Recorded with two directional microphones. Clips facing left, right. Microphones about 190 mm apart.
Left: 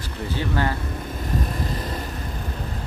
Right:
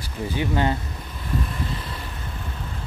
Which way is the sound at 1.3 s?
40° left (ahead or behind).